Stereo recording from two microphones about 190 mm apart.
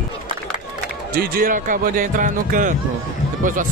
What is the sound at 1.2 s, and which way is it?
Speech, 45° right (ahead or behind).